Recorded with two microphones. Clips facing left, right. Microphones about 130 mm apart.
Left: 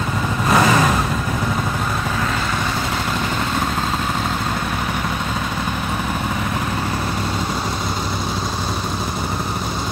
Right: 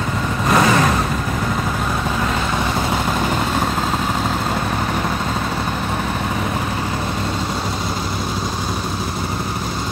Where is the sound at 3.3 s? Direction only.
10° right (ahead or behind).